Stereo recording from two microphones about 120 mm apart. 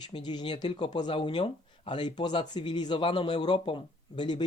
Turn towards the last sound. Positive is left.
turn(degrees=40)  # may be behind; listen again after turning